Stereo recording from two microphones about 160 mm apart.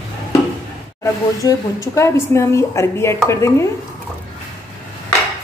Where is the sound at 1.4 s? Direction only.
20° left (ahead or behind).